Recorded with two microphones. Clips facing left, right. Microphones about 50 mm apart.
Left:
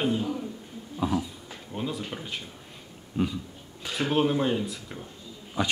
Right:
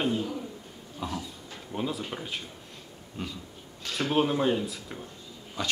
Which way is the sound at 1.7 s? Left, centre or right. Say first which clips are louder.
Even; centre.